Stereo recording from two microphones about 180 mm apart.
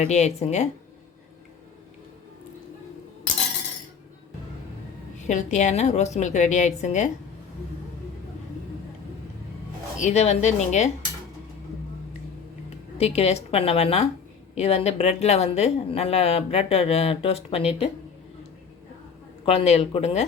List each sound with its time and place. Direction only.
0.0 s a woman's voice: 40° left (ahead or behind)
5.1 s a woman's voice: 40° left (ahead or behind)
10.0 s a woman's voice: 40° left (ahead or behind)
13.0 s a woman's voice: 35° left (ahead or behind)
19.5 s a woman's voice: 35° left (ahead or behind)